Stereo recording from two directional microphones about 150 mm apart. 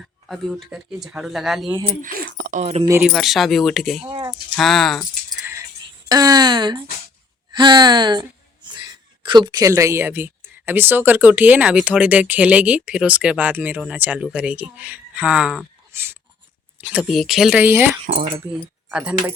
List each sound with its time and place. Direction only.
0.3 s speech: centre (ahead or behind)
2.6 s speech: 45° right (ahead or behind)
3.1 s speech: centre (ahead or behind)
4.1 s speech: 25° right (ahead or behind)
4.5 s speech: centre (ahead or behind)
6.1 s speech: 25° right (ahead or behind); by 15.6 s 5° right (ahead or behind)
15.9 s a sound: 15° right (ahead or behind)
16.8 s speech: 5° right (ahead or behind)
18.0 s speech: 60° right (ahead or behind)
18.9 s speech: 5° right (ahead or behind)